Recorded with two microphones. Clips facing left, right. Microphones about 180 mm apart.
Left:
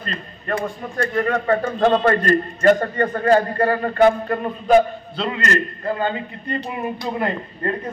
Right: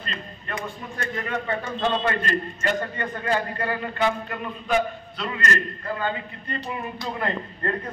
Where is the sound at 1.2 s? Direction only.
50° left (ahead or behind); by 5.3 s 30° left (ahead or behind).